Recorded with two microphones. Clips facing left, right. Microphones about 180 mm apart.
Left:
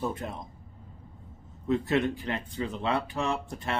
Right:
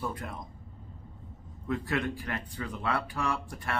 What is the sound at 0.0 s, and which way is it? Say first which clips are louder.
Speech: left 4 dB; 25° left (ahead or behind).